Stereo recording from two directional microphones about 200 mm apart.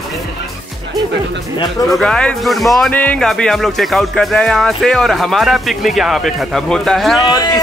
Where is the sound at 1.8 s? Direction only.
Centre (ahead or behind).